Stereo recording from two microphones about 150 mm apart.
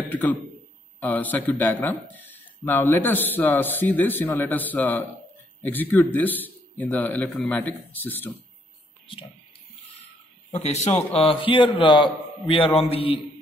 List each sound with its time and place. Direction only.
0.1 s speech: 10° left (ahead or behind)
11.2 s a man's voice: 35° left (ahead or behind)